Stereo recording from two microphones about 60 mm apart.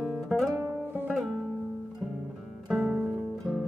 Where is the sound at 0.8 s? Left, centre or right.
Right.